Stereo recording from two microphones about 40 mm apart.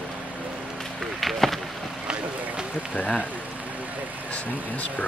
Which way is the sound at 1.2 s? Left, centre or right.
Centre.